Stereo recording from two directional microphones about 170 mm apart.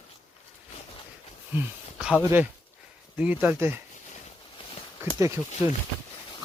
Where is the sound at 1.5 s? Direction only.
5° right (ahead or behind).